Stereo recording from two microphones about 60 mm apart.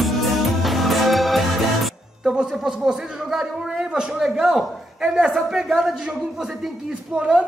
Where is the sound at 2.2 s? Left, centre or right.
Centre.